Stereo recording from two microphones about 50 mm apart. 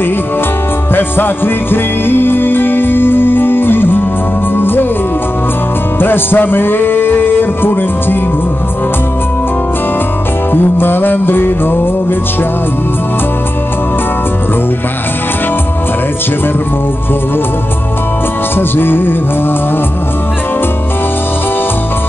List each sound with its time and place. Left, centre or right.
0.9 s music: left
5.9 s music: left
10.5 s music: left
18.6 s music: left